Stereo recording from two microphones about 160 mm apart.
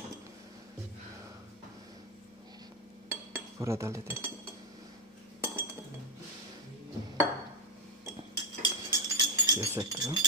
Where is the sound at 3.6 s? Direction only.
20° right (ahead or behind).